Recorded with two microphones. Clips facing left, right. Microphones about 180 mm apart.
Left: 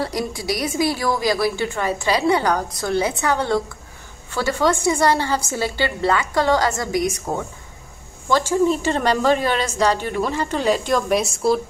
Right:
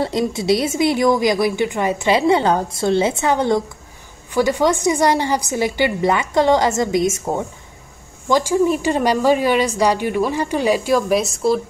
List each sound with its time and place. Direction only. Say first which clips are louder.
0.0 s a woman's voice: right 5 dB; 25° right (ahead or behind)
8.3 s a woman's voice: right 2 dB; 15° right (ahead or behind)